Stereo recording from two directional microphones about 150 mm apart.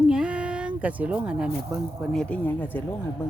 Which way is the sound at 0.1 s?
5° right (ahead or behind).